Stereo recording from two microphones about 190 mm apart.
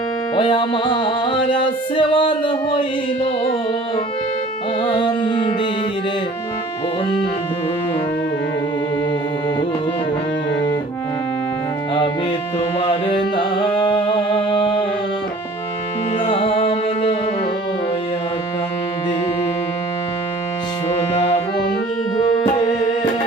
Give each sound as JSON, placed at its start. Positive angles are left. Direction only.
{"t": 0.3, "sound": "music", "side_deg": 25}
{"t": 4.8, "sound": "music", "side_deg": 25}
{"t": 12.8, "sound": "music", "side_deg": 30}
{"t": 16.2, "sound": "music", "side_deg": 30}
{"t": 22.6, "sound": "music", "side_deg": 40}